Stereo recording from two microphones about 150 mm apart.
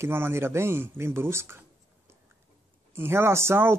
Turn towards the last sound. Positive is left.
turn(degrees=-15)  # may be behind; listen again after turning